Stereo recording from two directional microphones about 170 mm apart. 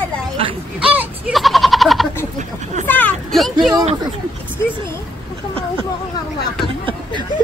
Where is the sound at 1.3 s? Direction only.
Centre (ahead or behind).